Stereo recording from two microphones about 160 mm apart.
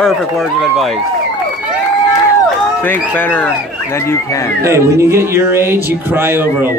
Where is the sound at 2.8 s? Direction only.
10° left (ahead or behind).